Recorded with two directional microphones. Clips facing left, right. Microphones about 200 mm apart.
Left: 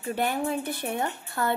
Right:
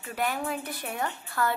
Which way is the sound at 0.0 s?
30° left (ahead or behind).